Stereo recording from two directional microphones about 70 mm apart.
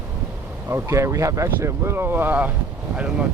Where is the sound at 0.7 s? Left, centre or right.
Right.